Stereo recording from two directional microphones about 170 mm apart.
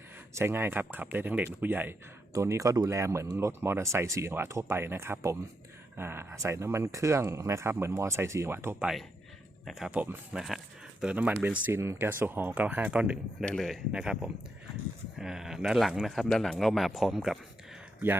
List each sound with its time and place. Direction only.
0.3 s speech: 15° right (ahead or behind)
9.6 s speech: 5° right (ahead or behind)
13.4 s speech: 5° left (ahead or behind)